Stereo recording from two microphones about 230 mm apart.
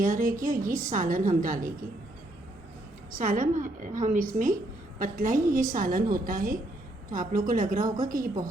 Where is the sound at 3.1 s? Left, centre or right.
Right.